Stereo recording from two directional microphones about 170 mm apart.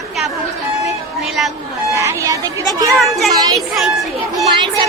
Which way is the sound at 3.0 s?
Centre (ahead or behind).